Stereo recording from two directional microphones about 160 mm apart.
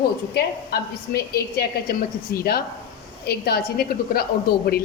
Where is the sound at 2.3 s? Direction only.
70° left (ahead or behind).